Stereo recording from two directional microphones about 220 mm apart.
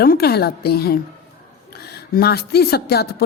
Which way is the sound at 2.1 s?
45° left (ahead or behind).